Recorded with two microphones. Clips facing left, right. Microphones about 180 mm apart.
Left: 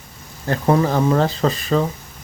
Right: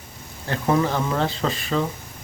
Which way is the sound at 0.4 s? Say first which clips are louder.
Left 4 dB; 40° left (ahead or behind).